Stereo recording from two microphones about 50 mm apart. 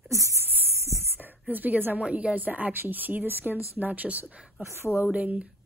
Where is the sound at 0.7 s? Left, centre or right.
Right.